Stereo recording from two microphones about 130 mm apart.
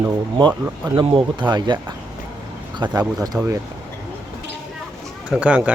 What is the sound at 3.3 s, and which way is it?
Speech, 10° right (ahead or behind).